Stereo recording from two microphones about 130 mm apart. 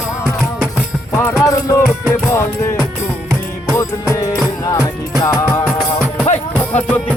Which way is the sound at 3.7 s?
20° left (ahead or behind).